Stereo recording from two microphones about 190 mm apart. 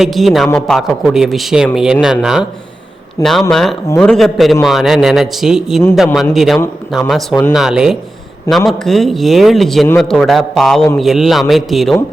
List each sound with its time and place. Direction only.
0.0 s a man's voice: centre (ahead or behind)
3.2 s speech: 15° left (ahead or behind)
3.5 s a man's voice: centre (ahead or behind)